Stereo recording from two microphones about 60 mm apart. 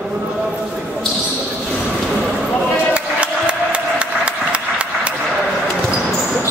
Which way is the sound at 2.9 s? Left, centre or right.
Centre.